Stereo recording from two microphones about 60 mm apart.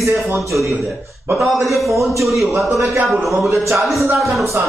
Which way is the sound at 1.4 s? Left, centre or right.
Centre.